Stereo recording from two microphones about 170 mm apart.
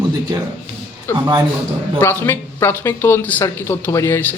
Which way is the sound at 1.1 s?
15° left (ahead or behind).